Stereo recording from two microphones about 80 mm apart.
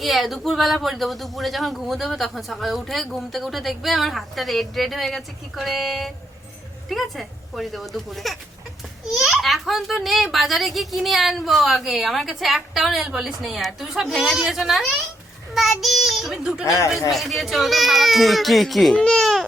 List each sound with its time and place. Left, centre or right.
0.0 s a child's voice: centre
16.6 s speech: left
17.1 s speech: centre